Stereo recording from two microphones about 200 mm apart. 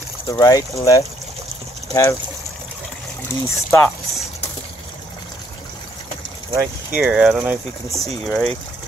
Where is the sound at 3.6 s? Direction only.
10° left (ahead or behind).